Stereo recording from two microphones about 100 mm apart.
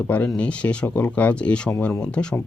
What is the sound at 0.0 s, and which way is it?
Speech, 15° left (ahead or behind).